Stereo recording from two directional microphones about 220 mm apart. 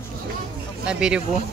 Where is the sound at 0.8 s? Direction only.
5° right (ahead or behind).